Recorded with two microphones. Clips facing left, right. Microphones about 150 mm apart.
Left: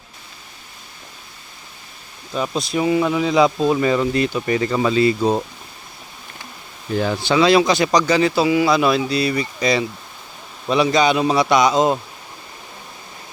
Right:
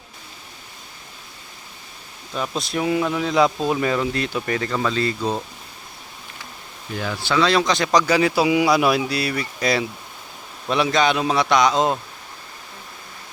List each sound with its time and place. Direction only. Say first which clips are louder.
2.3 s speech: left 3 dB; centre (ahead or behind)
6.9 s speech: left 7 dB; 35° left (ahead or behind)
7.2 s speech: left 4 dB; 15° left (ahead or behind)
8.0 s speech: left 2 dB; 10° right (ahead or behind)
9.3 s speech: left 4 dB; 5° left (ahead or behind)
10.7 s speech: left 3 dB; centre (ahead or behind)